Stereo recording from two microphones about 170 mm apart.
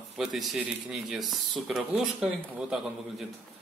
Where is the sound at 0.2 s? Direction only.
Centre (ahead or behind).